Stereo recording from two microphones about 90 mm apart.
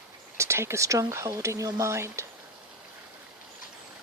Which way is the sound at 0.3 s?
30° right (ahead or behind).